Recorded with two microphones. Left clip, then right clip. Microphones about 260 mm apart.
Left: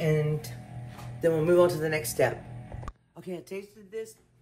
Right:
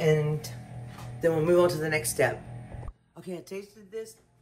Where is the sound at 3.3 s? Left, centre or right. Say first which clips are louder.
Even; left.